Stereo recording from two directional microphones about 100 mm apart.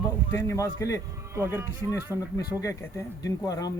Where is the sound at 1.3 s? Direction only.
25° right (ahead or behind).